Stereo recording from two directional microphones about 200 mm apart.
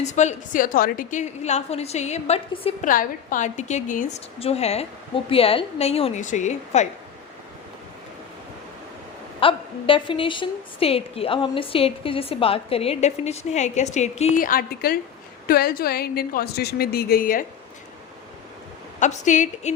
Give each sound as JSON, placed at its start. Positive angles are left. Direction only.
{"t": 0.0, "sound": "a woman's voice", "side_deg": 35}
{"t": 2.9, "sound": "a woman's voice", "side_deg": 45}
{"t": 9.4, "sound": "a woman's voice", "side_deg": 25}
{"t": 18.9, "sound": "a woman's voice", "side_deg": 35}